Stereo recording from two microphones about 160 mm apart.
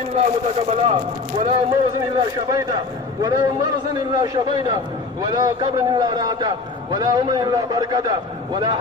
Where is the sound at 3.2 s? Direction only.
25° right (ahead or behind).